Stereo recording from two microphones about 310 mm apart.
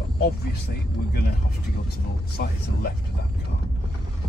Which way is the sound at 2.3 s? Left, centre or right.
Left.